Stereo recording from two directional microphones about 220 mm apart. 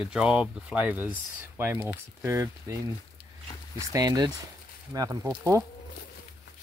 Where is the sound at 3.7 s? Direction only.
15° right (ahead or behind).